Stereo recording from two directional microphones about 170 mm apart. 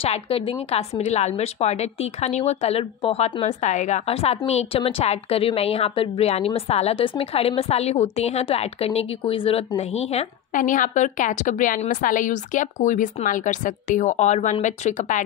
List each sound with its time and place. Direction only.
0.0 s a woman's voice: 35° left (ahead or behind)